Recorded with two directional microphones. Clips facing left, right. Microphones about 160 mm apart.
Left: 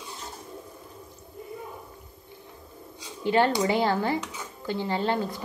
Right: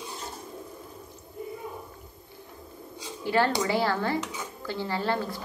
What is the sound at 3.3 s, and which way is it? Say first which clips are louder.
A woman's voice: left 2 dB; 20° left (ahead or behind).